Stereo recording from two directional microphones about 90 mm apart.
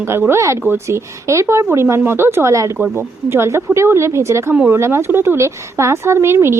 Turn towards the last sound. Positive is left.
turn(degrees=-30)  # may be behind; listen again after turning